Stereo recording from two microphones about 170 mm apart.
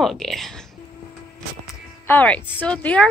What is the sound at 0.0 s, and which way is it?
Speech, centre (ahead or behind).